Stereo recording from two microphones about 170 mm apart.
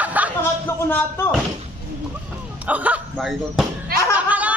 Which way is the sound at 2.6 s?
10° right (ahead or behind).